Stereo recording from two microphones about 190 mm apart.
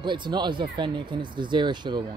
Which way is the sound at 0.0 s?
25° right (ahead or behind).